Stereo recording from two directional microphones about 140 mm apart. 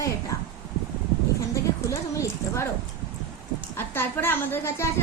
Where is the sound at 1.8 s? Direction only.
20° left (ahead or behind).